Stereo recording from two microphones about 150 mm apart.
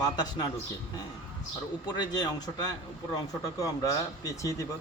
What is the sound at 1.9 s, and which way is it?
Speech, 30° left (ahead or behind).